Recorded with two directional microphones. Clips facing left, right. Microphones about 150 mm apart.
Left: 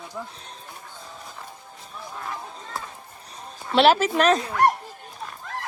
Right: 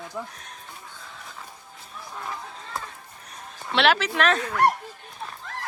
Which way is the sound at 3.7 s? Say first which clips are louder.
Left 4 dB; 40° left (ahead or behind).